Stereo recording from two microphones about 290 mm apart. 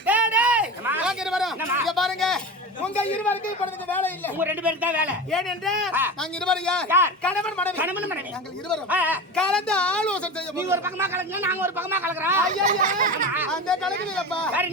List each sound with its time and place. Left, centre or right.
0.0 s a sound: centre
2.8 s speech: centre
4.4 s speech: centre
6.8 s a man's voice: centre
7.2 s speech: centre
7.8 s speech: centre
10.6 s a man's voice: centre
12.5 s speech: right
13.3 s speech: centre